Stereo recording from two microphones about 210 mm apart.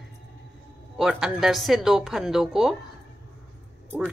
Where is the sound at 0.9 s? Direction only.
Centre (ahead or behind).